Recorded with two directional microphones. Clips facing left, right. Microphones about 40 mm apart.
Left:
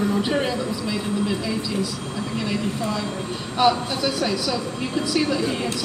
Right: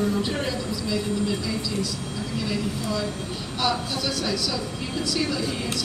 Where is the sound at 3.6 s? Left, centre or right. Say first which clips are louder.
Left 6 dB; centre.